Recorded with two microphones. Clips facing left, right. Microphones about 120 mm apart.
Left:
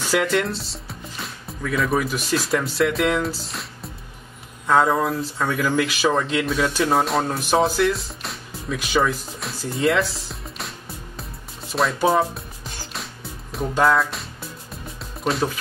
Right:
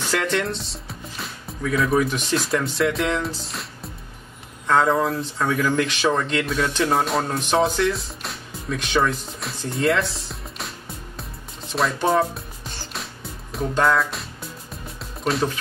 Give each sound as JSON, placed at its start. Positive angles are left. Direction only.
{"t": 0.0, "sound": "speech", "side_deg": 5}
{"t": 11.1, "sound": "music", "side_deg": 0}
{"t": 15.2, "sound": "speech", "side_deg": 0}